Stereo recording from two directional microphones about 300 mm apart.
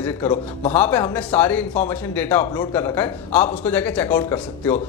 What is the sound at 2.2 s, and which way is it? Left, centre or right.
A man's voice, centre.